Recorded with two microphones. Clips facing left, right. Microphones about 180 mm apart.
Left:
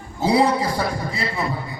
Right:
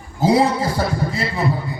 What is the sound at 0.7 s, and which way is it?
Speech, 40° right (ahead or behind).